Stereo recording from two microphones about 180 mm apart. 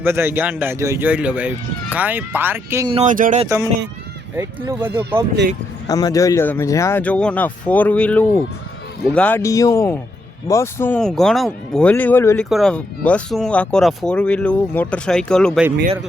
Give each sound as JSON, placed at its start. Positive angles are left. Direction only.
{"t": 0.0, "sound": "speech", "side_deg": -15}
{"t": 3.0, "sound": "speech", "side_deg": -45}
{"t": 3.4, "sound": "speech", "side_deg": -15}
{"t": 4.8, "sound": "speech", "side_deg": -10}
{"t": 5.9, "sound": "speech", "side_deg": 20}
{"t": 12.5, "sound": "speech", "side_deg": 0}